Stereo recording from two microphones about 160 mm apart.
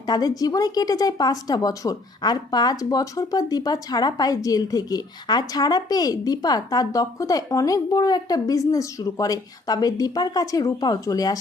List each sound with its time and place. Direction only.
0.0 s speech: 25° left (ahead or behind)